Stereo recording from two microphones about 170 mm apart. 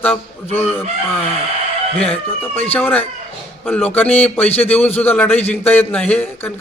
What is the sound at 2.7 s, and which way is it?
A man's voice, 10° left (ahead or behind).